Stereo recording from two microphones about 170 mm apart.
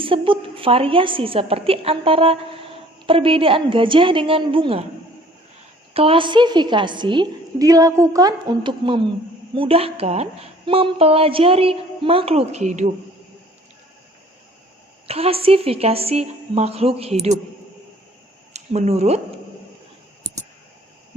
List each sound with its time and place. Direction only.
0.0 s a woman's voice: 30° right (ahead or behind)
5.9 s a woman's voice: 35° right (ahead or behind)
15.0 s a woman's voice: 35° right (ahead or behind)
18.5 s speech: 40° right (ahead or behind)